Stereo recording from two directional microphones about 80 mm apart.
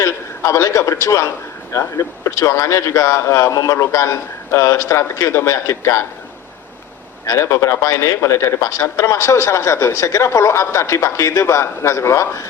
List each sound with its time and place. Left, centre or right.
0.0 s speech: left
7.3 s speech: left